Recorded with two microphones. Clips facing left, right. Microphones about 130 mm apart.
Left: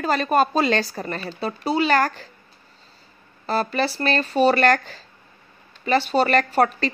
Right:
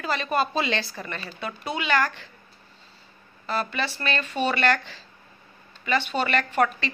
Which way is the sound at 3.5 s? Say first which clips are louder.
Left 6 dB; 35° left (ahead or behind).